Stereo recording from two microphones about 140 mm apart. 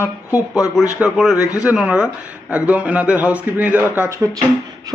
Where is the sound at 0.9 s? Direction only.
5° right (ahead or behind).